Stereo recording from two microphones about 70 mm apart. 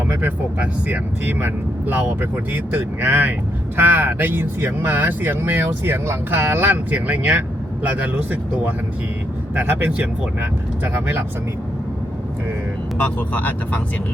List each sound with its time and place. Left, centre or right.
0.1 s speech: right
9.6 s speech: right
13.0 s speech: left